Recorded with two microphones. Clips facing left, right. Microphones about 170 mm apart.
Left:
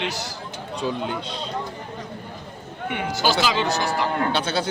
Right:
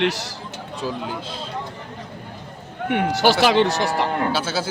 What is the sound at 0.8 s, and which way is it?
Speech, centre (ahead or behind).